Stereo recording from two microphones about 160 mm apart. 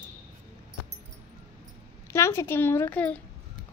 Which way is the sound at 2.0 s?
15° left (ahead or behind).